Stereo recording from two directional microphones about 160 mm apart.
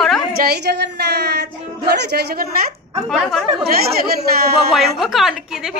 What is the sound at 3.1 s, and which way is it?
Speech, centre (ahead or behind).